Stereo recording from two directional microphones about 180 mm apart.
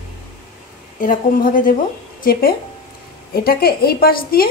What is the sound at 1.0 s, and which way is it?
A woman's voice, 50° left (ahead or behind).